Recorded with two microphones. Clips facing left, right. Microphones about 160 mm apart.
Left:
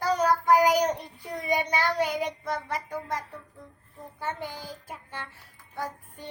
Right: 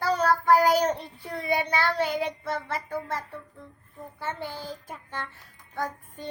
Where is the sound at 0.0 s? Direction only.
15° left (ahead or behind).